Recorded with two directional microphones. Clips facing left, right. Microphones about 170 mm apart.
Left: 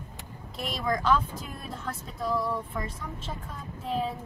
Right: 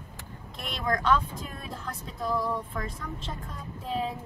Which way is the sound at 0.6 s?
Centre (ahead or behind).